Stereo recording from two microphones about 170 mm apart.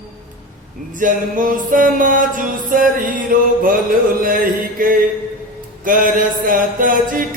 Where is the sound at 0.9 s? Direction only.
50° right (ahead or behind).